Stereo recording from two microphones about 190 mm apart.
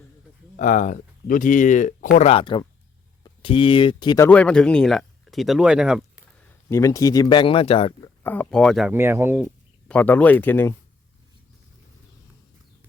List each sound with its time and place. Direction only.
0.5 s speech: 40° left (ahead or behind)
2.2 s speech: 30° left (ahead or behind)
4.3 s speech: 5° left (ahead or behind)
6.7 s speech: 15° left (ahead or behind)
8.2 s speech: 10° left (ahead or behind)
8.9 s speech: 10° right (ahead or behind)
9.9 s speech: 10° left (ahead or behind)